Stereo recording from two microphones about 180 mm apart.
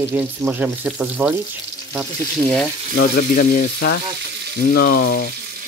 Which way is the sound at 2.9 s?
55° left (ahead or behind).